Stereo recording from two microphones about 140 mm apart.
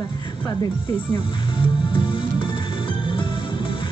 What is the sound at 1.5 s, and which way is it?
Music, 35° left (ahead or behind).